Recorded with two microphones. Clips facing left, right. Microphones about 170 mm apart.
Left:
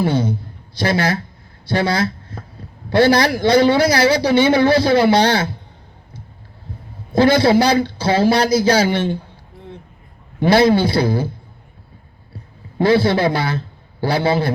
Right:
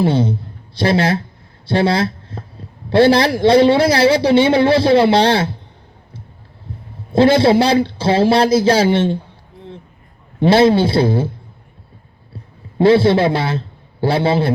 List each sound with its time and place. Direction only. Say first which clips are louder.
0.0 s a man's voice: right 2 dB; 30° right (ahead or behind)
7.1 s speech: right 2 dB; 30° right (ahead or behind)
10.4 s speech: right 2 dB; 25° right (ahead or behind)
12.8 s a man's voice: right 3 dB; 25° right (ahead or behind)